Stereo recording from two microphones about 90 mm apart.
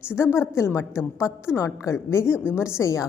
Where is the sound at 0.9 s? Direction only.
10° right (ahead or behind).